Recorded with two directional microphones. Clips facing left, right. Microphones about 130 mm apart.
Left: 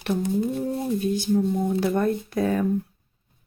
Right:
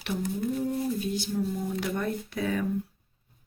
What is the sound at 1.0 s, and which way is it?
Speech, 50° left (ahead or behind).